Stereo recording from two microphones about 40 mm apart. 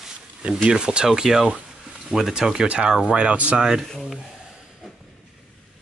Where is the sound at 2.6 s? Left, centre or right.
Right.